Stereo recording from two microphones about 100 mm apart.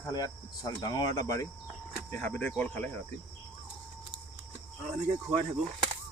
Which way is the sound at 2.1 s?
15° left (ahead or behind).